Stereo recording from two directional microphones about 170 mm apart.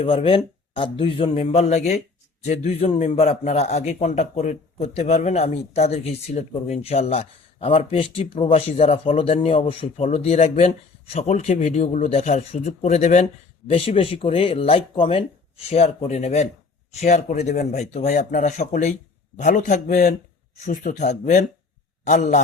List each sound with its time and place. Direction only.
0.0 s a man's voice: 35° left (ahead or behind)